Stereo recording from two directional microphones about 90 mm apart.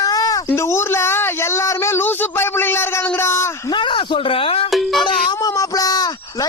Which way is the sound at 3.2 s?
30° left (ahead or behind).